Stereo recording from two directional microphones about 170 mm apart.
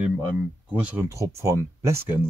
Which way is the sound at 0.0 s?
5° right (ahead or behind).